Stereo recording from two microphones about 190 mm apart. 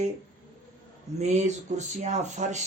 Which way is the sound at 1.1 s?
35° right (ahead or behind).